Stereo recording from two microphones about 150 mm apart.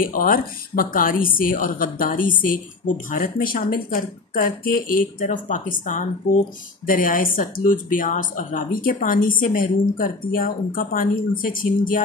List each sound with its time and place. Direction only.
0.0 s a woman's voice: 70° left (ahead or behind)